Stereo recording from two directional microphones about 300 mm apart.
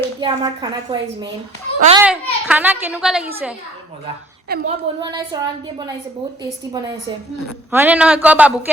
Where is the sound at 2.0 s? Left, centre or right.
Centre.